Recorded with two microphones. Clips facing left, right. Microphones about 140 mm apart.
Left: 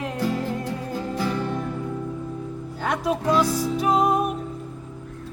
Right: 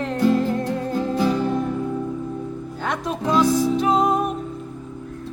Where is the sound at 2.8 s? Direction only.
5° left (ahead or behind).